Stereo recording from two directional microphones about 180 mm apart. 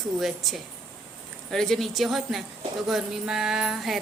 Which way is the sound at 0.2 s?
Centre (ahead or behind).